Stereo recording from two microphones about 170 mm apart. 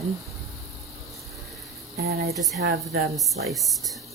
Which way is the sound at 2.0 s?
70° right (ahead or behind).